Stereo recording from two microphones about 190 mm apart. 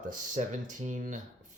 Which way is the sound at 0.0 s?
45° right (ahead or behind).